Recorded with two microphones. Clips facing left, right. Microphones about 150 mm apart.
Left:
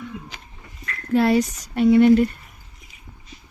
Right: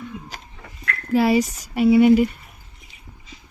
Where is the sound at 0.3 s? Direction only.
45° right (ahead or behind).